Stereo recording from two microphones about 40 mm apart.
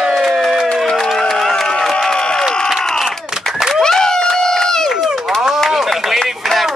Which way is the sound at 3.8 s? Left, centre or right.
Centre.